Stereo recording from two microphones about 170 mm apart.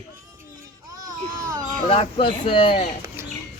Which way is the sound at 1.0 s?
20° right (ahead or behind).